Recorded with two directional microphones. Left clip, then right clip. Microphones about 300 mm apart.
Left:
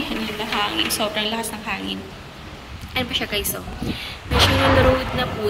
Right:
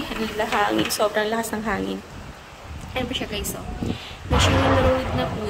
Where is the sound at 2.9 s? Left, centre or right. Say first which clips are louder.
Left 4 dB; centre.